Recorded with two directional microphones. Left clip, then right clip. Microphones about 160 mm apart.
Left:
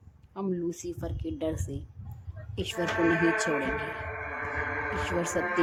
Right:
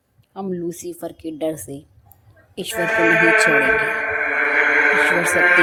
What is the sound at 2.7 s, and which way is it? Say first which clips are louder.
Speech: right 11 dB; 90° right.